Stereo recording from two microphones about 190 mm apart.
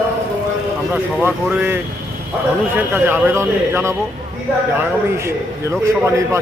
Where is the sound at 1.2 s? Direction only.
10° right (ahead or behind).